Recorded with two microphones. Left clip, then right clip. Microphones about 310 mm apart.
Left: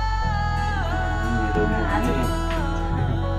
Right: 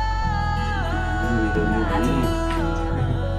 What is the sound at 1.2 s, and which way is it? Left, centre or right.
Music, right.